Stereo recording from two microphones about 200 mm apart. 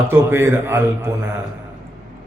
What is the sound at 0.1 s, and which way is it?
Speech, 10° right (ahead or behind).